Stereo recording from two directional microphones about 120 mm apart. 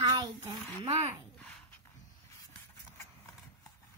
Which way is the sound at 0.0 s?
30° right (ahead or behind).